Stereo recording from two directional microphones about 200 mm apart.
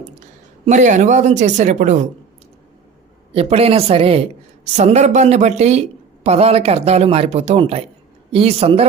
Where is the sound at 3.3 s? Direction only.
30° right (ahead or behind).